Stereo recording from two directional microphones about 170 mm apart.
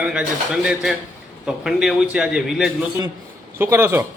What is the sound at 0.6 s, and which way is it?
A man's voice, 5° right (ahead or behind).